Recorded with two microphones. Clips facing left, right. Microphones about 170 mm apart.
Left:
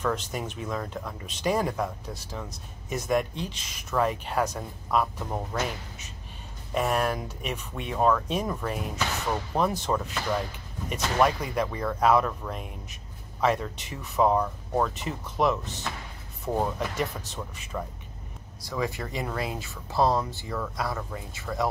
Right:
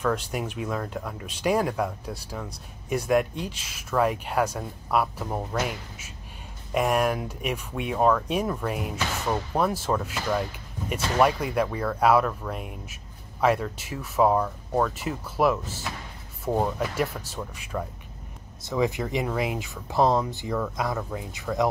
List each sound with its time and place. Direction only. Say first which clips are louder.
0.0 s speech: right 2 dB; 10° right (ahead or behind)
18.6 s speech: right 5 dB; 20° right (ahead or behind)
21.5 s speech: right 4 dB; 5° right (ahead or behind)